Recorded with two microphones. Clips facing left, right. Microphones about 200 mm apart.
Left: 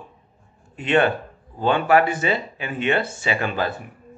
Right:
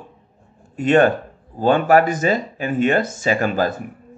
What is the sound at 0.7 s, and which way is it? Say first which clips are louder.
Speech: right 5 dB; 45° right (ahead or behind).